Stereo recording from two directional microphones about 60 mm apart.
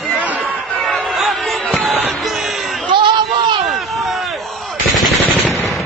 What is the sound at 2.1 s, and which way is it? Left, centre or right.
Music, centre.